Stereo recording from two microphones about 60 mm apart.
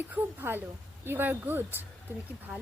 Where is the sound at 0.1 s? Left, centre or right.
Right.